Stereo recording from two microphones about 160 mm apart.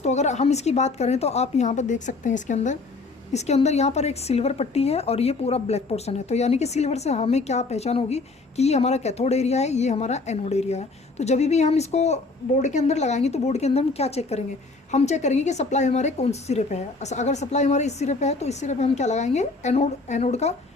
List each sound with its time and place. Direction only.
0.0 s speech: 45° left (ahead or behind)